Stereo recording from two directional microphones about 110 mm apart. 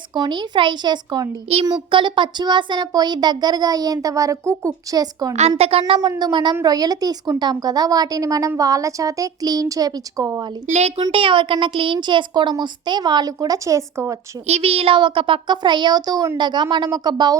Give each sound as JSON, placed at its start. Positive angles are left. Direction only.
{"t": 0.1, "sound": "speech", "side_deg": -40}
{"t": 5.3, "sound": "a woman's voice", "side_deg": -80}
{"t": 6.0, "sound": "speech", "side_deg": -35}
{"t": 10.7, "sound": "speech", "side_deg": -80}
{"t": 11.1, "sound": "a child's voice", "side_deg": -55}
{"t": 14.4, "sound": "a child's voice", "side_deg": -70}